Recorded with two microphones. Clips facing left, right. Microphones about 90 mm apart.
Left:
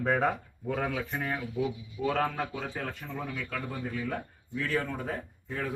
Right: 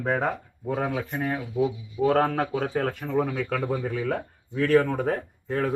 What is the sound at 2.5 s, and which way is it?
Speech, 55° right (ahead or behind).